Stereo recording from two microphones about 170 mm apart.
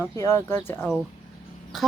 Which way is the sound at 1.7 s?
Centre (ahead or behind).